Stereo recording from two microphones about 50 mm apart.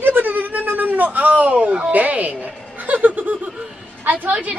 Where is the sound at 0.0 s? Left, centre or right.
Right.